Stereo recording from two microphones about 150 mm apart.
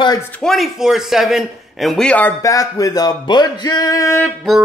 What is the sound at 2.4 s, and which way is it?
Music, 20° left (ahead or behind).